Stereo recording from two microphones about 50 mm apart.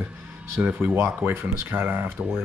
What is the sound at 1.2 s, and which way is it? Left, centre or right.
Speech, right.